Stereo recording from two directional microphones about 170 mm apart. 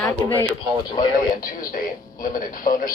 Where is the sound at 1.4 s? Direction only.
55° left (ahead or behind).